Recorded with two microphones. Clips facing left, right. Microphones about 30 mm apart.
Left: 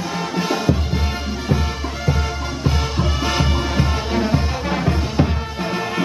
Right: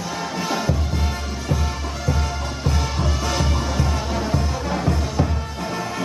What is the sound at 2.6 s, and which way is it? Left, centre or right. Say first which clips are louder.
Music: left 3 dB; left.